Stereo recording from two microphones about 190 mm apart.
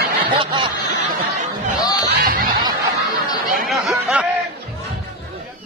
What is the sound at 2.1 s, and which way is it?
Snicker, 55° right (ahead or behind).